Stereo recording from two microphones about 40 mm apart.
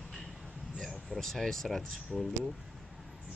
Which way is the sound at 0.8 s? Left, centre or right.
Centre.